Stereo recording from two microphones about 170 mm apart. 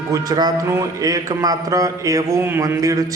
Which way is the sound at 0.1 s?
25° right (ahead or behind).